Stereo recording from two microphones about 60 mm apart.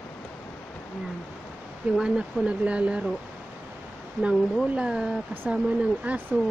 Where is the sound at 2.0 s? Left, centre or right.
Centre.